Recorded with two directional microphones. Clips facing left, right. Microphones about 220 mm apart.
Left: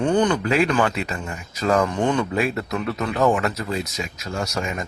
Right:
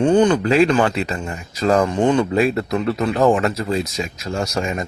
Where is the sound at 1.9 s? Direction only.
20° right (ahead or behind).